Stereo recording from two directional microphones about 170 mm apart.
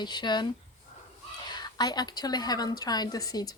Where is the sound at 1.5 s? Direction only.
25° left (ahead or behind).